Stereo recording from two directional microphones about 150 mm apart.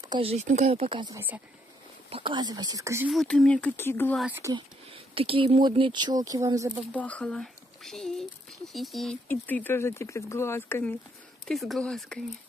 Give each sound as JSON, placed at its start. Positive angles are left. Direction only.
{"t": 0.2, "sound": "speech", "side_deg": -45}
{"t": 1.1, "sound": "speech", "side_deg": -10}
{"t": 2.0, "sound": "speech", "side_deg": -35}
{"t": 3.1, "sound": "speech", "side_deg": 0}
{"t": 4.4, "sound": "speech", "side_deg": -25}
{"t": 4.9, "sound": "speech", "side_deg": -40}
{"t": 6.9, "sound": "speech", "side_deg": 10}
{"t": 9.3, "sound": "speech", "side_deg": 15}
{"t": 11.4, "sound": "speech", "side_deg": 0}